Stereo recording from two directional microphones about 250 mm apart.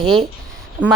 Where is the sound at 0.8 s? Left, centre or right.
Right.